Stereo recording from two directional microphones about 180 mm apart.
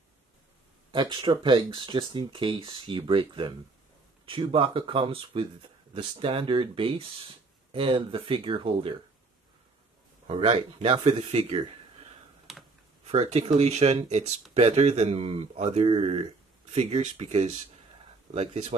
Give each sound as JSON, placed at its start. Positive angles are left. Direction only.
{"t": 0.9, "sound": "speech", "side_deg": -25}
{"t": 10.2, "sound": "speech", "side_deg": -30}
{"t": 12.5, "sound": "computer keyboard", "side_deg": 0}
{"t": 13.0, "sound": "speech", "side_deg": -35}